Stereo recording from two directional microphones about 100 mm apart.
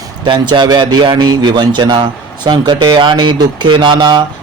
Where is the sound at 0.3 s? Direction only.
50° right (ahead or behind).